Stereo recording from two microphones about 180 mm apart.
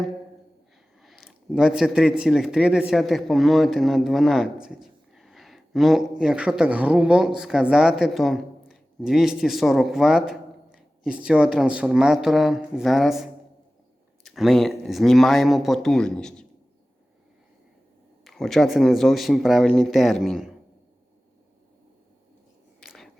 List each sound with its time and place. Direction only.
1.0 s speech: centre (ahead or behind)
18.3 s speech: centre (ahead or behind)
22.8 s whispering: centre (ahead or behind)